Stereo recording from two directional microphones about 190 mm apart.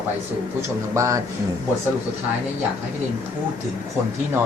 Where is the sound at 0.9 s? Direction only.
15° right (ahead or behind).